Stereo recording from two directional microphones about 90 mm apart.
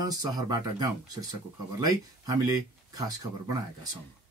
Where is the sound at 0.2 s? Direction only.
45° right (ahead or behind).